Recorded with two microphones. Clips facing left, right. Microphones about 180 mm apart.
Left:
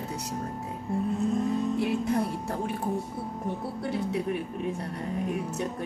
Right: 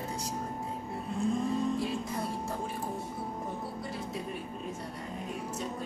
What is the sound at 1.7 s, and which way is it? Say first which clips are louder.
Speech: left 7 dB; 65° left (ahead or behind).